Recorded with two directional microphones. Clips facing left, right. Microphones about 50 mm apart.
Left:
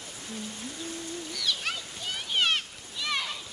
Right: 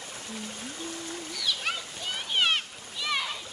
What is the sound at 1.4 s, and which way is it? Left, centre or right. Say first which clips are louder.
Splash: right 1 dB; centre.